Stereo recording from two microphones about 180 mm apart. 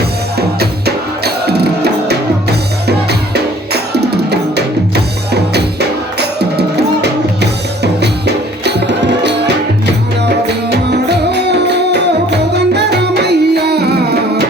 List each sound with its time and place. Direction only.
0.3 s music: 60° right (ahead or behind)
6.1 s music: 65° right (ahead or behind)
8.6 s music: 70° right (ahead or behind)